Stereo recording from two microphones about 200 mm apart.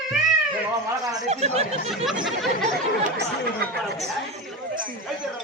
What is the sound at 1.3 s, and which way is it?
Speech, 30° right (ahead or behind).